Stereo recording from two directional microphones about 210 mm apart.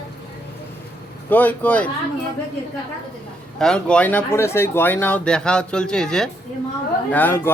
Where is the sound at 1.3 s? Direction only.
10° left (ahead or behind).